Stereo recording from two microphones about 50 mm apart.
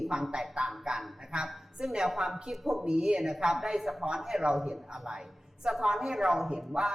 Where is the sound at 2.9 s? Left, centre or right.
Centre.